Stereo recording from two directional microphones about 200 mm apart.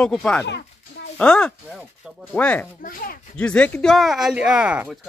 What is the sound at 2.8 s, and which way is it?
Speech, 45° left (ahead or behind).